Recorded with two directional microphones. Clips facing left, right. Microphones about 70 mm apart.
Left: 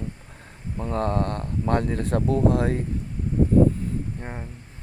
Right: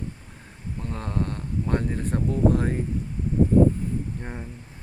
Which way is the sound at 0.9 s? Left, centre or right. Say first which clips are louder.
Left 6 dB; left.